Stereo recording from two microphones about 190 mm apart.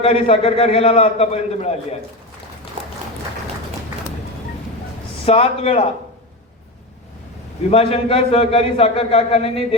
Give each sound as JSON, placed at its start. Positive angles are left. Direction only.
{"t": 0.0, "sound": "a man's voice", "side_deg": 30}
{"t": 5.2, "sound": "a man's voice", "side_deg": 30}
{"t": 7.7, "sound": "a man's voice", "side_deg": 30}